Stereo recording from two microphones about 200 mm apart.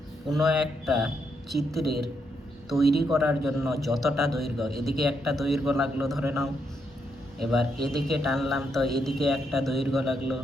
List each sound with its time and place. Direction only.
0.3 s a man's voice: centre (ahead or behind)
7.3 s a man's voice: centre (ahead or behind)